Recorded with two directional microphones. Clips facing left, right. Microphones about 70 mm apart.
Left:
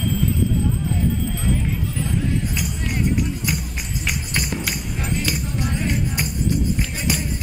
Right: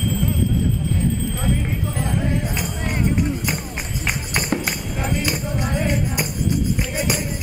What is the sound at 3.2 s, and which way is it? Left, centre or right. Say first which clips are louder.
Run: right 2 dB; right.